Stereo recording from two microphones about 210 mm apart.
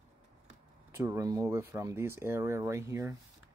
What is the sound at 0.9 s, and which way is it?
Speech, 15° right (ahead or behind).